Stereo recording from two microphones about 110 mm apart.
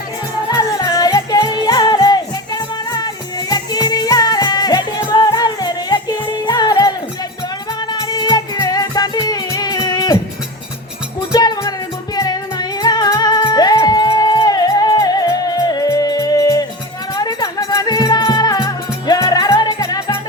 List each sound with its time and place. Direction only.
0.5 s music: 30° left (ahead or behind)
11.3 s music: 35° left (ahead or behind)